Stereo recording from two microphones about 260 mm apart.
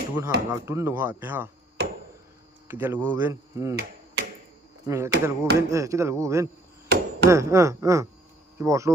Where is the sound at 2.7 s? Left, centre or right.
Centre.